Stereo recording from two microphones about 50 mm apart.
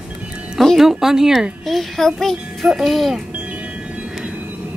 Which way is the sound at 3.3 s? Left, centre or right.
Right.